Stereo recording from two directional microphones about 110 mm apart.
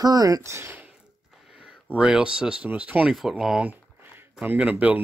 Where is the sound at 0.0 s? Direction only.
35° right (ahead or behind).